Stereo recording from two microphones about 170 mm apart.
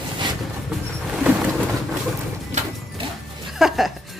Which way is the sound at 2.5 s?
45° right (ahead or behind).